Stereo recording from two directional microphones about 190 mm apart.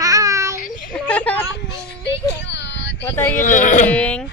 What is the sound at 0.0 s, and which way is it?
Child singing, 15° right (ahead or behind).